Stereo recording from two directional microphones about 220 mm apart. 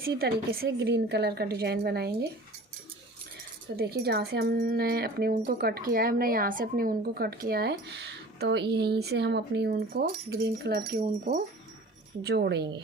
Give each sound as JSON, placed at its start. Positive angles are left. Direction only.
{"t": 0.0, "sound": "speech", "side_deg": -45}
{"t": 3.8, "sound": "speech", "side_deg": -45}
{"t": 12.2, "sound": "speech", "side_deg": -50}